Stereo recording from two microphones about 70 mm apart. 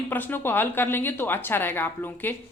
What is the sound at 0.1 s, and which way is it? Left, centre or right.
A woman's voice, left.